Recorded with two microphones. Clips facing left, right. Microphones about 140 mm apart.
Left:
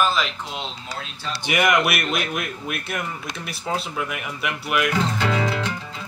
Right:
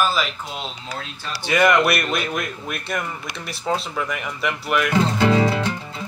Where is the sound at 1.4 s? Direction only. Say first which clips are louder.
Right 3 dB; 15° left (ahead or behind).